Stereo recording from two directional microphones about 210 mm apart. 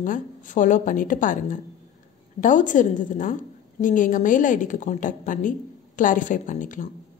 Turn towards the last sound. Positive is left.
turn(degrees=40)  # may be behind; listen again after turning